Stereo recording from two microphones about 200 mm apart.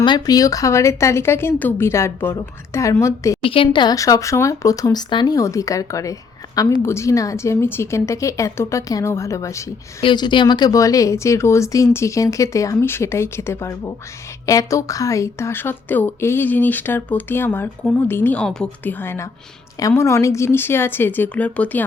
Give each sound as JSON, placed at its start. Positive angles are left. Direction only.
{"t": 0.0, "sound": "speech", "side_deg": 20}
{"t": 3.4, "sound": "speech", "side_deg": 25}